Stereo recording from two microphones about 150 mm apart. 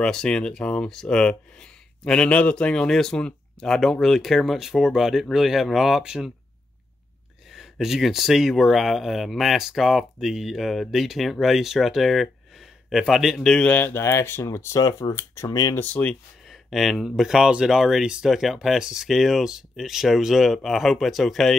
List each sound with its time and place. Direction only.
0.0 s speech: 5° left (ahead or behind)
7.5 s speech: centre (ahead or behind); by 15.8 s 25° left (ahead or behind)
15.8 s speech: 10° left (ahead or behind)